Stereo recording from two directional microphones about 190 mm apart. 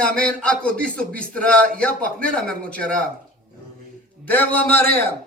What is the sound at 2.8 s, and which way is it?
Speech, 45° right (ahead or behind).